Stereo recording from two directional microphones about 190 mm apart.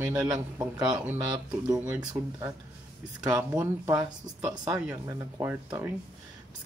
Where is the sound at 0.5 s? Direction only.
15° right (ahead or behind).